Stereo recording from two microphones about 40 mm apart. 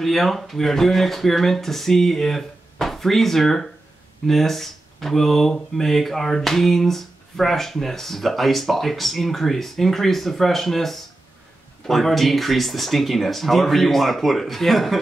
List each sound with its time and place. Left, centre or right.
0.0 s speech: centre